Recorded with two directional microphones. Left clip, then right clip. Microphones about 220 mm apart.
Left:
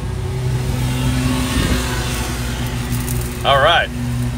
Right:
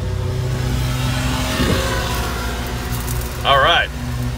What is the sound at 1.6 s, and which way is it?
Music, 50° right (ahead or behind).